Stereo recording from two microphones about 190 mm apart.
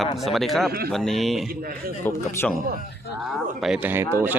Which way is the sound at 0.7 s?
55° right (ahead or behind).